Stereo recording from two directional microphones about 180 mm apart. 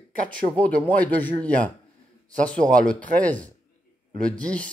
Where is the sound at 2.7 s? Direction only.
5° left (ahead or behind).